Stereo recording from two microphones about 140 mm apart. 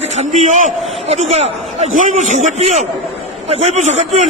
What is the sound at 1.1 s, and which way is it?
A man's voice, 50° right (ahead or behind).